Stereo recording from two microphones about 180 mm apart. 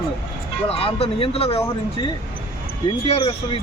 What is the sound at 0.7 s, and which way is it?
Speech, 30° left (ahead or behind).